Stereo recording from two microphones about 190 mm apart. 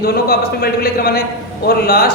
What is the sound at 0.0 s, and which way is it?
Speech, 55° left (ahead or behind).